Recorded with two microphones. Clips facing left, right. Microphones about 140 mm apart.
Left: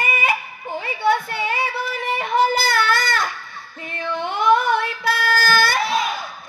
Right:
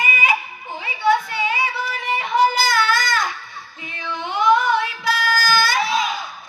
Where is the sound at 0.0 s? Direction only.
55° left (ahead or behind).